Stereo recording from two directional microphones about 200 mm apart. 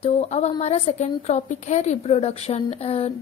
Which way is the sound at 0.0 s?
30° left (ahead or behind).